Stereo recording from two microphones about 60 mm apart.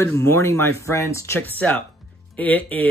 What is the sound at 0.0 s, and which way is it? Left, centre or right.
Speech, left.